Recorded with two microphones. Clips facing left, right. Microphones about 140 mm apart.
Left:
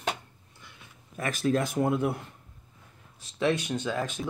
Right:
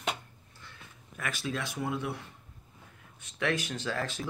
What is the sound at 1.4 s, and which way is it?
Speech, 45° left (ahead or behind).